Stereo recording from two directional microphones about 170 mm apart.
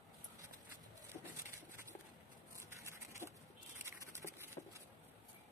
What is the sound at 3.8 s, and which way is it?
Patter, 15° right (ahead or behind).